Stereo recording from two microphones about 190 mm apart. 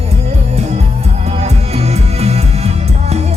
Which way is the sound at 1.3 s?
35° right (ahead or behind).